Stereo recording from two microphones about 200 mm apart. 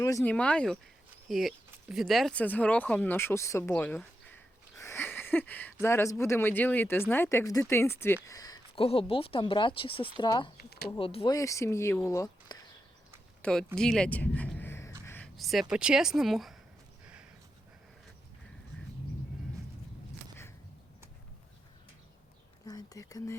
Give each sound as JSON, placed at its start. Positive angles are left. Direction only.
{"t": 0.0, "sound": "speech", "side_deg": 15}
{"t": 4.8, "sound": "a sound", "side_deg": 10}
{"t": 5.8, "sound": "speech", "side_deg": 15}
{"t": 10.6, "sound": "a sound", "side_deg": 50}
{"t": 10.9, "sound": "speech", "side_deg": 25}
{"t": 11.3, "sound": "speech", "side_deg": 15}
{"t": 13.4, "sound": "speech", "side_deg": 5}
{"t": 22.6, "sound": "whispering", "side_deg": 20}